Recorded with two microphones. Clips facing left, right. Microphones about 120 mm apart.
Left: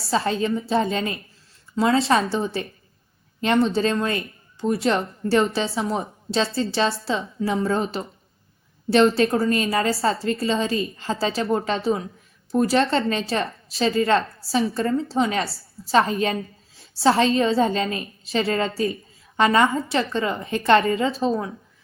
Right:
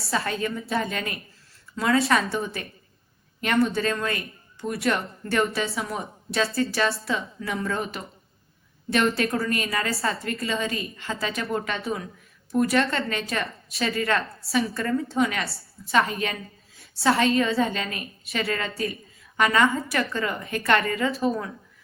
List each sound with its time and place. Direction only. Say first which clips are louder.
0.1 s a woman's voice: left 5 dB; 25° left (ahead or behind)